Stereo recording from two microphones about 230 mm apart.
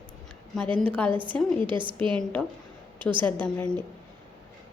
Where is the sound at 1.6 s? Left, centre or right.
Right.